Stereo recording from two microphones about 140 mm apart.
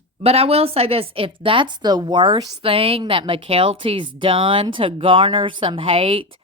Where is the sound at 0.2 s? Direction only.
45° right (ahead or behind).